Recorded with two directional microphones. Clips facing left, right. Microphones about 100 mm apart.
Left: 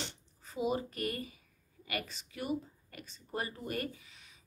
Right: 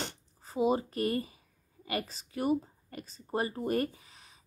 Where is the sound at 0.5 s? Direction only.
35° right (ahead or behind).